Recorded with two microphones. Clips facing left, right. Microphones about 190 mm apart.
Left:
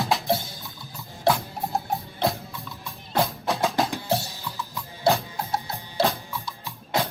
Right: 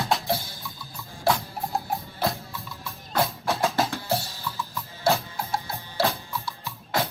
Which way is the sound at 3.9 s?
15° left (ahead or behind).